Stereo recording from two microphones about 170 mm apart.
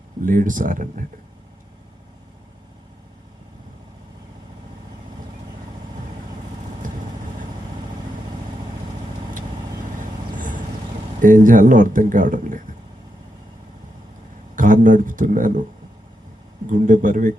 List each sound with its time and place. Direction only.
0.2 s speech: 50° right (ahead or behind)
10.3 s vehicle: 50° right (ahead or behind)
11.2 s speech: 50° right (ahead or behind)
14.5 s speech: 50° right (ahead or behind)
16.6 s speech: 50° right (ahead or behind)